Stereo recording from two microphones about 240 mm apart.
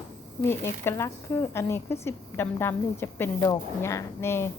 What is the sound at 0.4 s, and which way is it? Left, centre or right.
Speech, centre.